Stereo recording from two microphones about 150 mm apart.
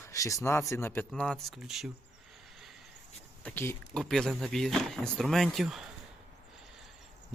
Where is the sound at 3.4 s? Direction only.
15° left (ahead or behind).